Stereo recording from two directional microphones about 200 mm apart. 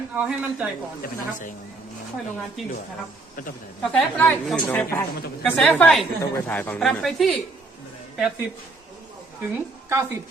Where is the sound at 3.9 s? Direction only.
5° left (ahead or behind).